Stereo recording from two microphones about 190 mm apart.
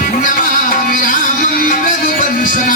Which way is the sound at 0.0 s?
45° left (ahead or behind).